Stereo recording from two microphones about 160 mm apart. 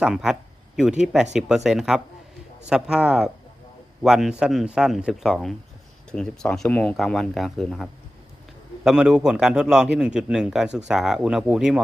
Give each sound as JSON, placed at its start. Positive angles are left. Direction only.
{"t": 0.0, "sound": "speech", "side_deg": -5}